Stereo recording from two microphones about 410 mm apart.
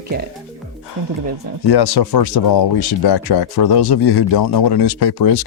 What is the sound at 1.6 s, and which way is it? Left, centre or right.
Speech, left.